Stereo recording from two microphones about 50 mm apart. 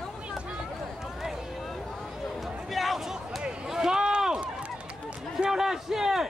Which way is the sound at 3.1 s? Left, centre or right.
Centre.